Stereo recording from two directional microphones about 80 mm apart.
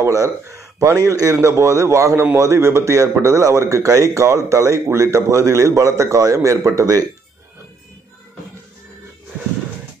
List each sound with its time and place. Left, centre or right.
0.0 s speech: right